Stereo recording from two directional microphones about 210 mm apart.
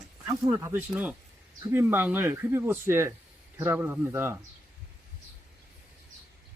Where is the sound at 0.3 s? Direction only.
15° right (ahead or behind).